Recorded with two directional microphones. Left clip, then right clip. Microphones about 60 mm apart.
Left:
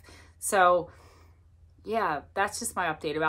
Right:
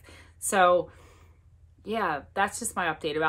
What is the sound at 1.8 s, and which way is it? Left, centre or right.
A woman's voice, left.